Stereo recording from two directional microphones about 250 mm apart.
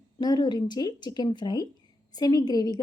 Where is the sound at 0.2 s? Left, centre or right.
Centre.